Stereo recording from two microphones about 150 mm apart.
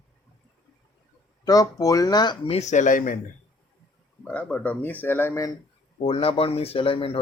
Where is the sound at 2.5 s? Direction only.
50° left (ahead or behind).